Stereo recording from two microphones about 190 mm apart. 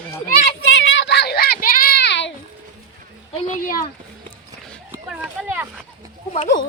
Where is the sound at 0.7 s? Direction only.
80° left.